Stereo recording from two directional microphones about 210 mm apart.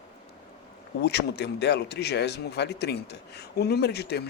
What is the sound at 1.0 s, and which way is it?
Speech, 50° left (ahead or behind).